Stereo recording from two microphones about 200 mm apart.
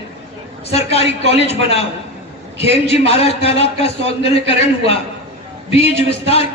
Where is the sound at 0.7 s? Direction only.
30° left (ahead or behind).